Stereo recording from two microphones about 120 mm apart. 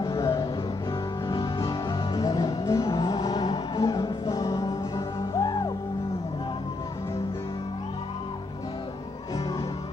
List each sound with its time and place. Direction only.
0.0 s music: 30° left (ahead or behind)
1.3 s music: 35° left (ahead or behind)